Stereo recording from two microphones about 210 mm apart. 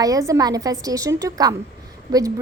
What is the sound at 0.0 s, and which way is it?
A woman's voice, 15° right (ahead or behind).